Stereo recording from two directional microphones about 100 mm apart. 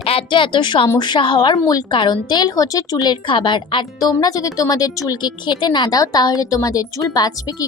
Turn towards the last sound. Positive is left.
turn(degrees=40)  # may be behind; listen again after turning